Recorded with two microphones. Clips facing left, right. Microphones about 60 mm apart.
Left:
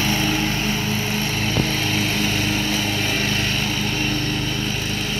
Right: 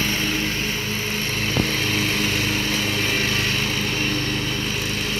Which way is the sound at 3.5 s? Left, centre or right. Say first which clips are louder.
Even; right.